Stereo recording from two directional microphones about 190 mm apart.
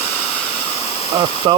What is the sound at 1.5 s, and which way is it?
Speech, 25° right (ahead or behind).